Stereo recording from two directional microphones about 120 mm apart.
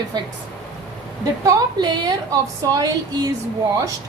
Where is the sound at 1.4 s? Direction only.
35° right (ahead or behind).